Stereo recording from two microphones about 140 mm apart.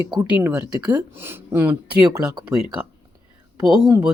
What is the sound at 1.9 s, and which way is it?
Speech, 30° right (ahead or behind).